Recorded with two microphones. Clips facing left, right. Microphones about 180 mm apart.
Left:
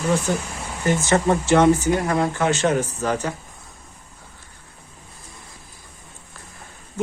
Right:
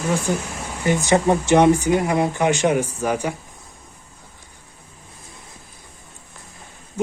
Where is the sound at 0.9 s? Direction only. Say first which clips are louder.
Right 2 dB; 15° right (ahead or behind).